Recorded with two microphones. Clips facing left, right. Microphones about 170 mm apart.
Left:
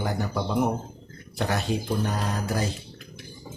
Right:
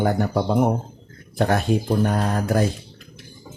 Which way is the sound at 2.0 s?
55° right (ahead or behind).